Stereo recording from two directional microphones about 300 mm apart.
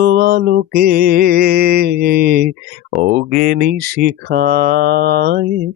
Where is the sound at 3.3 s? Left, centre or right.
Right.